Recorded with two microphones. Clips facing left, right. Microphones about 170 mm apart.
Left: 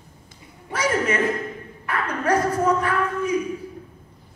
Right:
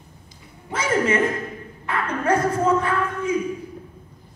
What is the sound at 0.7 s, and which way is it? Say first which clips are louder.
Music: right 1 dB; 25° right (ahead or behind).